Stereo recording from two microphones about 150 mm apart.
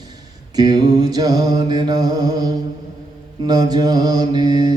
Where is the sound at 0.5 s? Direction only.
25° right (ahead or behind).